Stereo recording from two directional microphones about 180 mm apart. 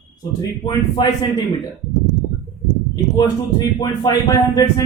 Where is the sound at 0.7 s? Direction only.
20° left (ahead or behind).